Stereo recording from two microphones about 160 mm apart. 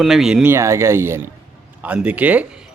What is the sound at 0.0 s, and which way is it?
Speech, centre (ahead or behind).